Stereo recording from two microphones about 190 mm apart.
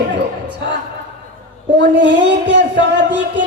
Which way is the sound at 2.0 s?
70° right (ahead or behind).